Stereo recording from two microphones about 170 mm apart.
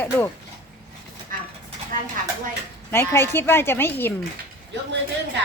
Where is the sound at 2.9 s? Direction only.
15° left (ahead or behind).